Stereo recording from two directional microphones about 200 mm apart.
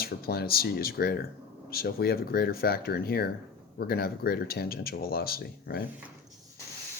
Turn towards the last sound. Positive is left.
turn(degrees=50)  # may be behind; listen again after turning